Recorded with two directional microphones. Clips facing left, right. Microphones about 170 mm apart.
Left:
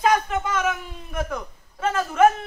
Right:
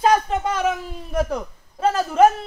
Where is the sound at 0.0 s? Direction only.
30° right (ahead or behind).